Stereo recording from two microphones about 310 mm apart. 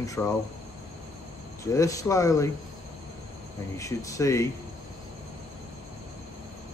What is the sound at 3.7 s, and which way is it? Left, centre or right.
Speech, centre.